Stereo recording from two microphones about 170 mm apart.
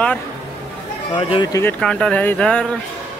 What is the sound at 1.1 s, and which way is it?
Speech, 25° left (ahead or behind).